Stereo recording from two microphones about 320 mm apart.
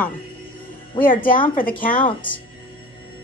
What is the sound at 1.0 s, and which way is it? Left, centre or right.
Speech, left.